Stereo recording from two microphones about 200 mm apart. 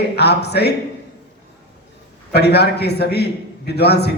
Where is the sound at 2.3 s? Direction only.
55° left (ahead or behind).